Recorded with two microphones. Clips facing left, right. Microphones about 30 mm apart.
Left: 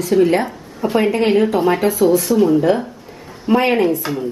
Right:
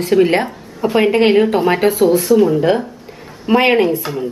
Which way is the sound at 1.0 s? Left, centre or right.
Right.